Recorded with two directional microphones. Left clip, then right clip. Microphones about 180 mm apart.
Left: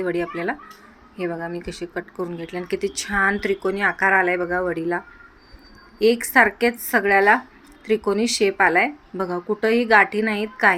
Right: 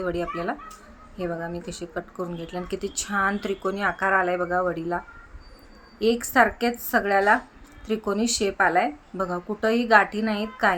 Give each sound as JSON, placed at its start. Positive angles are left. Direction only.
{"t": 0.0, "sound": "speech", "side_deg": -5}